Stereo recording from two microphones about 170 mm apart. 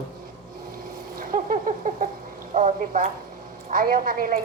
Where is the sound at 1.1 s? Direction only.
55° right (ahead or behind).